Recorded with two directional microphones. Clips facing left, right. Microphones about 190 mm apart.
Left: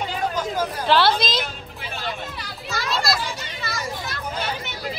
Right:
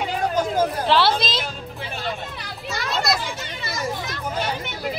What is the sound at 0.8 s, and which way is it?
Speech, centre (ahead or behind).